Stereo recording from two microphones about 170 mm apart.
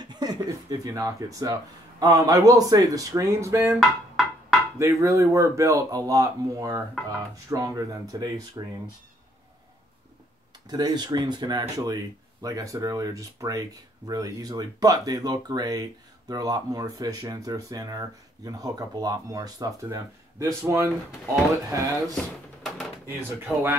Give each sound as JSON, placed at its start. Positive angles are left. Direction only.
{"t": 0.0, "sound": "speech", "side_deg": -25}
{"t": 3.8, "sound": "a sound", "side_deg": 0}
{"t": 4.7, "sound": "speech", "side_deg": -20}
{"t": 10.7, "sound": "speech", "side_deg": -25}
{"t": 22.1, "sound": "speech", "side_deg": 0}
{"t": 23.0, "sound": "speech", "side_deg": -10}